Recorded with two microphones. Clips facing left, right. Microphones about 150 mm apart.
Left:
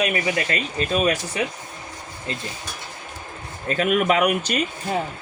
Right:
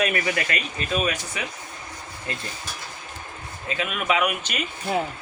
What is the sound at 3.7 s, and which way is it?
Speech, 45° left (ahead or behind).